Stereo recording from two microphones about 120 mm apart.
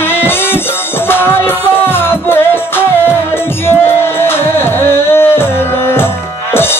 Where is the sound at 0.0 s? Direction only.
20° left (ahead or behind).